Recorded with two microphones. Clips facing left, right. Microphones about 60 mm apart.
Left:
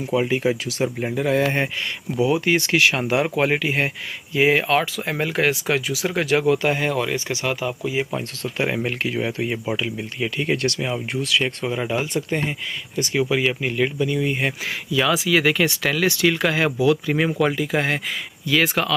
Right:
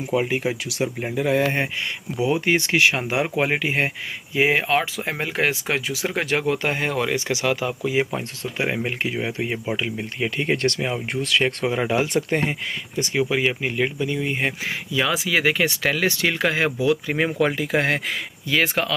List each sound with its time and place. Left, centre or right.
0.1 s speech: centre
2.2 s speech: right
3.0 s speech: centre; by 7.0 s right
7.2 s speech: right
7.6 s speech: right
8.1 s speech: centre
9.8 s speech: right
11.9 s speech: right
12.2 s speech: right
12.9 s speech: right
17.6 s speech: right
18.5 s speech: right